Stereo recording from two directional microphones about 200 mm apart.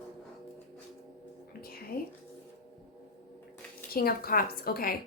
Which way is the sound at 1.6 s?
50° left (ahead or behind).